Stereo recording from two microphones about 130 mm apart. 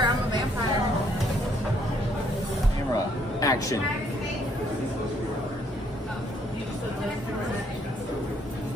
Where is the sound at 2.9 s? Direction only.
25° left (ahead or behind).